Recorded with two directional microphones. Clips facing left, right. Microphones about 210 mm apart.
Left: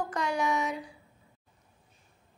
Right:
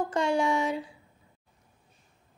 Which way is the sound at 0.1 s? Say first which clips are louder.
Right 5 dB; 30° right (ahead or behind).